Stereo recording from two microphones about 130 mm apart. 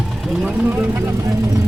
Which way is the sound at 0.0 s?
5° right (ahead or behind).